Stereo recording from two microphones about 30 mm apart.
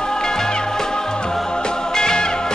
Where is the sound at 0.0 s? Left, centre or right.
Left.